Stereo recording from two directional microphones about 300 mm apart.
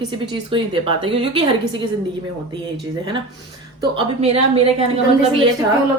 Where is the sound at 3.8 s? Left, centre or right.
Centre.